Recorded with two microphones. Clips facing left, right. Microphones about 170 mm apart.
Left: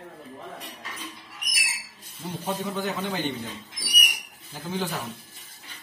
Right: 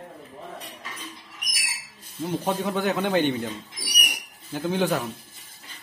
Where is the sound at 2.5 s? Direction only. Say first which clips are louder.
Right 3 dB; 65° right (ahead or behind).